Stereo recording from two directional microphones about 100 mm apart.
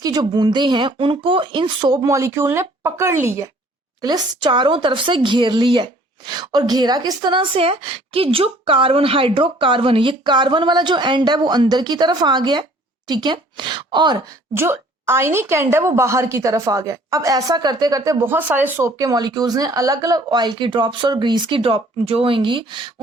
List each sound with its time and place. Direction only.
0.0 s speech: 45° right (ahead or behind); by 3.5 s 30° right (ahead or behind)
4.0 s speech: 45° right (ahead or behind)
14.5 s a woman's voice: 25° right (ahead or behind)
18.8 s speech: 35° right (ahead or behind); by 22.9 s 55° right (ahead or behind)